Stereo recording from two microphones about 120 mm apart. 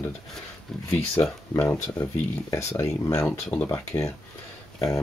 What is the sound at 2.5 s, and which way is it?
Speech, 25° left (ahead or behind).